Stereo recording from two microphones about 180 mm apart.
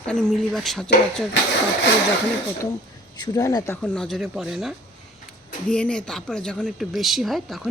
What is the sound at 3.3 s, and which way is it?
Speech, 20° left (ahead or behind).